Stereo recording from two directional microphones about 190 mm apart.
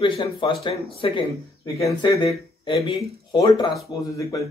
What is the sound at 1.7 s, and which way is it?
Speech, 15° left (ahead or behind).